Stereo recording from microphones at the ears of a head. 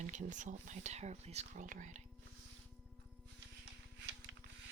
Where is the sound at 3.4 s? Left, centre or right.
Right.